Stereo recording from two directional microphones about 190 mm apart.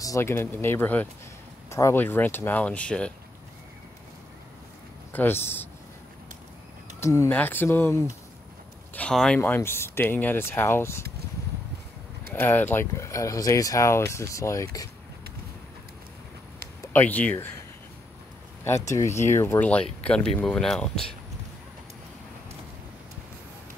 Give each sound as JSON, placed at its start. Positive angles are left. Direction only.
{"t": 0.0, "sound": "speech", "side_deg": 15}
{"t": 5.1, "sound": "speech", "side_deg": 10}
{"t": 7.0, "sound": "speech", "side_deg": 15}
{"t": 12.4, "sound": "speech", "side_deg": 10}
{"t": 16.8, "sound": "speech", "side_deg": 10}
{"t": 18.6, "sound": "speech", "side_deg": 15}